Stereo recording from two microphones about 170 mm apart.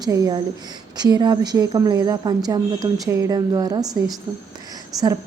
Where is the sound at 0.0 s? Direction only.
25° right (ahead or behind).